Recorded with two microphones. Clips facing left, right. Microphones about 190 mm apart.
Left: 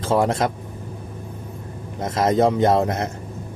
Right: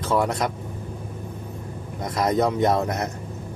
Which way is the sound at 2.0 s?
25° left (ahead or behind).